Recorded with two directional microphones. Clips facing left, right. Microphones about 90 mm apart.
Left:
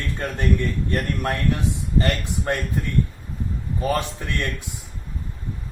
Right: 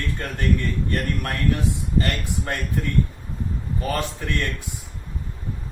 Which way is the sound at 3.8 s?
20° left (ahead or behind).